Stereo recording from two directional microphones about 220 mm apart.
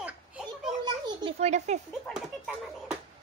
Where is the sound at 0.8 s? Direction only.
25° right (ahead or behind).